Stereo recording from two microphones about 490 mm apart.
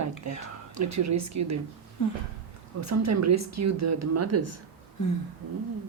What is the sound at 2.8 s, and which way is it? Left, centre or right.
Speech, right.